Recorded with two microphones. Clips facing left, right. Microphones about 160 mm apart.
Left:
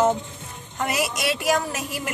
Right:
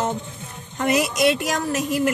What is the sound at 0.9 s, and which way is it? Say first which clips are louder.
Speech: right 7 dB; 50° right (ahead or behind).